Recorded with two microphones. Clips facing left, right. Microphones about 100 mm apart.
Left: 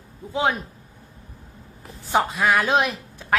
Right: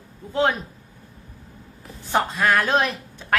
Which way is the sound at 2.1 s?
5° left (ahead or behind).